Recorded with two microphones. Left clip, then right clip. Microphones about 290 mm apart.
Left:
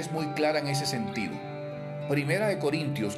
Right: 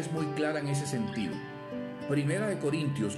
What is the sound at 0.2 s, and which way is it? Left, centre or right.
Speech, centre.